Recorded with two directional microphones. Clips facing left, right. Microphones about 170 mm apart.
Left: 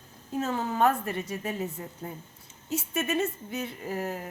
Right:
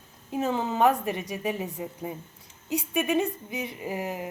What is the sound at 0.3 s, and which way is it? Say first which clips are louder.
Speech: right 2 dB; 15° right (ahead or behind).